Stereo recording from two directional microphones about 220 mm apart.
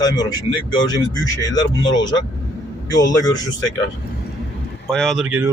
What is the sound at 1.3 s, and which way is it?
A man's voice, 15° left (ahead or behind).